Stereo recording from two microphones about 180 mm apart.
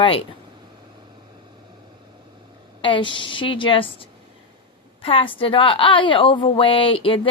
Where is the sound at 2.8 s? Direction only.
30° left (ahead or behind).